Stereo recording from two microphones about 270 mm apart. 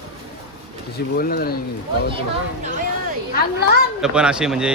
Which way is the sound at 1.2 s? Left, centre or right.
Left.